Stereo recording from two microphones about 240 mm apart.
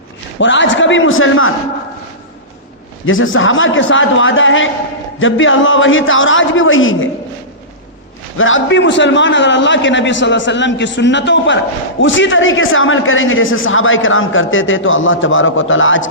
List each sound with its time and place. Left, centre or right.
0.3 s a man's voice: left
3.1 s a man's voice: left
8.4 s a man's voice: left